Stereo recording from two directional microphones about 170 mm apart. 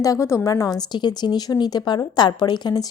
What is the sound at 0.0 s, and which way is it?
A woman's voice, 20° left (ahead or behind).